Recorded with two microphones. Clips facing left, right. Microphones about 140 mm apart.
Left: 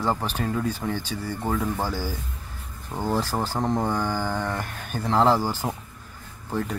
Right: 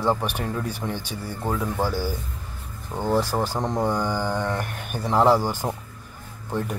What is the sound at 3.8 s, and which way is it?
Speech, 15° right (ahead or behind).